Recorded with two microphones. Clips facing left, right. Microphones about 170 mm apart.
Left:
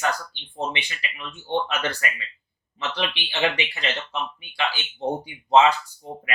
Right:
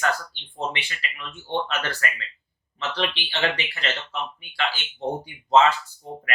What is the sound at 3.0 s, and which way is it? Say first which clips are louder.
Speech: left 1 dB; 15° left (ahead or behind).